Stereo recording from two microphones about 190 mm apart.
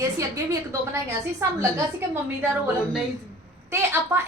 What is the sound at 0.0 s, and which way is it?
A woman's voice, 15° right (ahead or behind).